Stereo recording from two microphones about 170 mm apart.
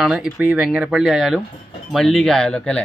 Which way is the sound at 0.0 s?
5° right (ahead or behind).